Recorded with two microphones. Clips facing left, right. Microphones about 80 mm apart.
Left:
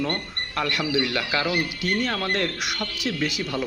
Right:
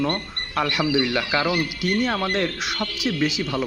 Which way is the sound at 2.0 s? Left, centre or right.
Centre.